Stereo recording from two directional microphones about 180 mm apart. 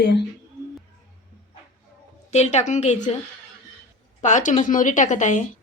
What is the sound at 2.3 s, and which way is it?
Speech, 40° left (ahead or behind).